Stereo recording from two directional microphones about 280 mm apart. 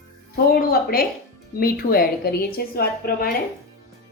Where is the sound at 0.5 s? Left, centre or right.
Left.